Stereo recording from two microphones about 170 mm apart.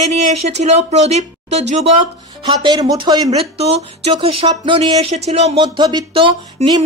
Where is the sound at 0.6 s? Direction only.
40° right (ahead or behind).